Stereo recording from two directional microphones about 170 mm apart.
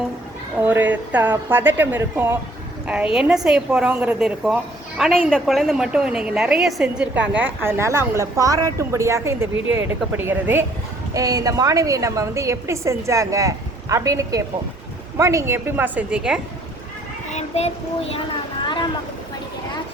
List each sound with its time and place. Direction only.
0.6 s a woman's voice: 10° right (ahead or behind)
17.3 s child singing: 40° left (ahead or behind)